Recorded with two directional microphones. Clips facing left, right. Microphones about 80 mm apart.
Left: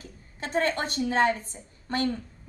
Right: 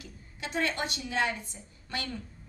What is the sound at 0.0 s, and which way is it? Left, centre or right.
A woman's voice, left.